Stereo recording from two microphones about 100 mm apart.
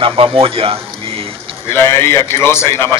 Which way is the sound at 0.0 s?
65° right (ahead or behind).